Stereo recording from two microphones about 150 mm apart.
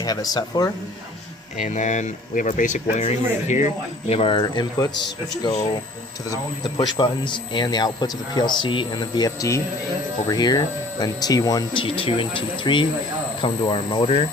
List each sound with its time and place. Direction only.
0.0 s speech: 25° left (ahead or behind)
1.6 s speech: 55° left (ahead or behind)
4.1 s speech: 35° left (ahead or behind)